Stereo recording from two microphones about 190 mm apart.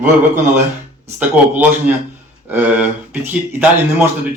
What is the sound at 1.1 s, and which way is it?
Speech, 10° right (ahead or behind).